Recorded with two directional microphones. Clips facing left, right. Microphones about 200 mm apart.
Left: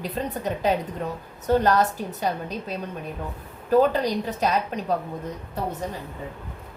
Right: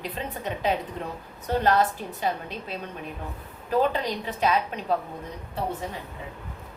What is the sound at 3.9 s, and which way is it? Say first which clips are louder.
Speech: left 5 dB; 40° left (ahead or behind).